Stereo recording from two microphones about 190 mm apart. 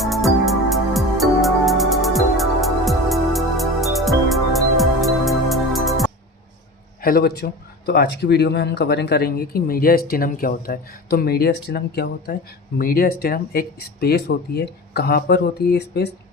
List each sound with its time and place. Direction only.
0.0 s music: centre (ahead or behind)
7.0 s speech: 50° left (ahead or behind)